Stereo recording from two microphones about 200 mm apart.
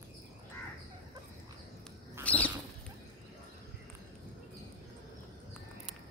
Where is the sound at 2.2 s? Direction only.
5° left (ahead or behind).